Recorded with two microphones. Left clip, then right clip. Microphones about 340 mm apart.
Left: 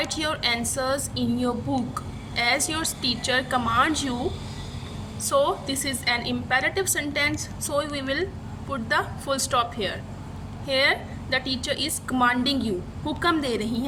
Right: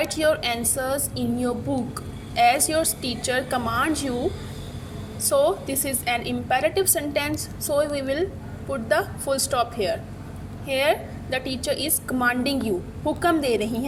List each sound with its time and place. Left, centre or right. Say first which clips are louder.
0.1 s a woman's voice: right 3 dB; centre
5.2 s a woman's voice: right 2 dB; centre